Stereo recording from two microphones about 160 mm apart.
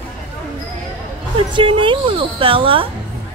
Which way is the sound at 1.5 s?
30° right (ahead or behind).